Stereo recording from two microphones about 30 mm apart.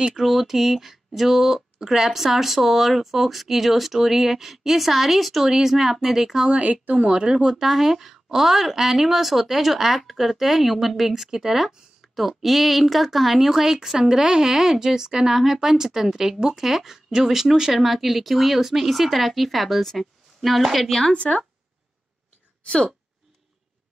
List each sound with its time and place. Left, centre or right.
0.2 s speech: centre
6.5 s speech: right
7.0 s speech: right
7.6 s speech: centre
11.2 s speech: centre
12.2 s a woman's voice: centre
13.9 s a woman's voice: right; by 20.9 s centre
21.1 s speech: left